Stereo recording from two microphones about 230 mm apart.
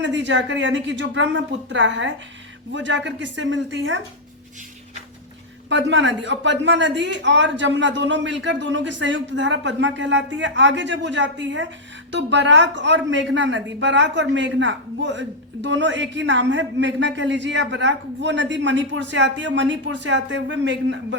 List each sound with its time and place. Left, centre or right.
0.0 s a woman's voice: right
5.6 s a woman's voice: right